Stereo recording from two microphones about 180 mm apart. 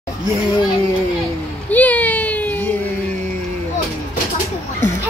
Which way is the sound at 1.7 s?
10° left (ahead or behind).